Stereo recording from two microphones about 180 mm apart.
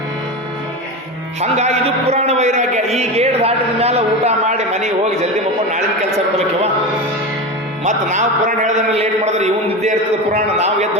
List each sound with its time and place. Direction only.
1.4 s a man's voice: 35° right (ahead or behind)
7.9 s a man's voice: 40° right (ahead or behind)